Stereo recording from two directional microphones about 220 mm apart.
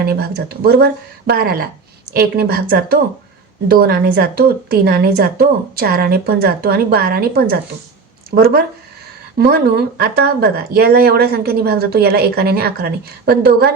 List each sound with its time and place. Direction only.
0.0 s speech: 45° right (ahead or behind)